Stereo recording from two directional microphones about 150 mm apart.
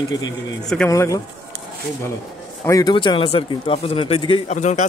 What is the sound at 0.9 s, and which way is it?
Speech, 20° left (ahead or behind).